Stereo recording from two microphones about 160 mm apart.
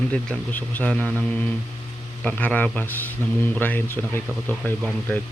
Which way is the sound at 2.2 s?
10° left (ahead or behind).